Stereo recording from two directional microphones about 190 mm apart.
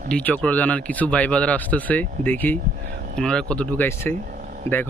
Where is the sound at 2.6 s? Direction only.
45° right (ahead or behind).